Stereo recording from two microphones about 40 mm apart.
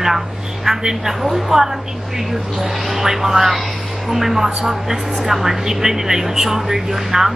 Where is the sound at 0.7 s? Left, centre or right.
Centre.